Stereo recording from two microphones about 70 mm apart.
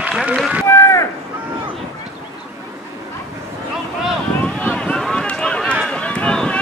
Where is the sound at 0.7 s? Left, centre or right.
Left.